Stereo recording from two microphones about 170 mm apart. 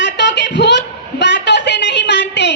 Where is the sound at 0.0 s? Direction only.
90° left.